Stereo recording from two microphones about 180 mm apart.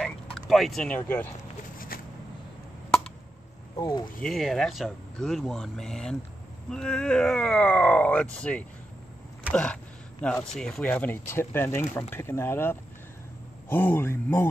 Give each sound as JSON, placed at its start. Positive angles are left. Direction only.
{"t": 0.0, "sound": "speech", "side_deg": 0}
{"t": 1.9, "sound": "shuffling cards", "side_deg": 55}
{"t": 3.7, "sound": "speech", "side_deg": 25}
{"t": 4.2, "sound": "speech", "side_deg": 0}